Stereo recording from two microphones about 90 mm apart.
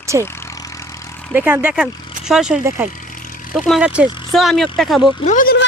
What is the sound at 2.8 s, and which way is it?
Speech, 30° right (ahead or behind).